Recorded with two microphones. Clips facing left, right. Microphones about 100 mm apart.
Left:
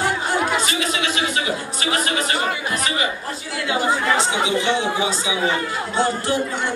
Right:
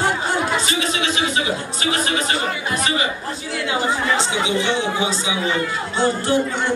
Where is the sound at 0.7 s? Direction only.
25° right (ahead or behind).